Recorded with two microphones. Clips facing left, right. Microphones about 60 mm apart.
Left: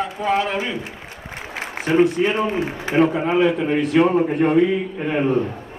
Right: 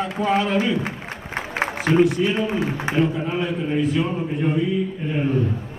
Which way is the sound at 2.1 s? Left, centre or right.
Left.